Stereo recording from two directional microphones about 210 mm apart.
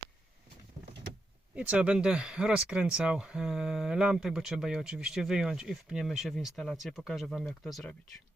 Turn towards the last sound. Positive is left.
turn(degrees=0)  # may be behind; listen again after turning